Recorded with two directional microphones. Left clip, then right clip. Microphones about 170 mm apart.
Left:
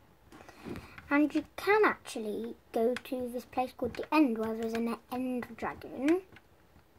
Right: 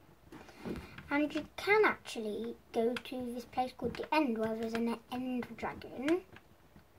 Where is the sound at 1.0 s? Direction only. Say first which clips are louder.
Left 5 dB; 40° left (ahead or behind).